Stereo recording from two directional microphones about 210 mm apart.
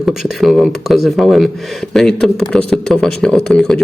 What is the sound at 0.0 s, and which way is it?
A man's voice, centre (ahead or behind).